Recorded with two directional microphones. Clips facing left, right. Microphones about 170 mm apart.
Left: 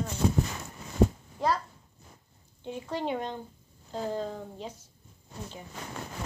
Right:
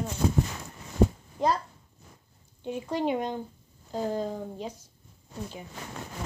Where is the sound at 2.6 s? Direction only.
15° right (ahead or behind).